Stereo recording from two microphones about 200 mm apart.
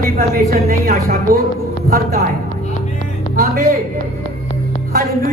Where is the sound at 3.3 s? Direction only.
45° right (ahead or behind).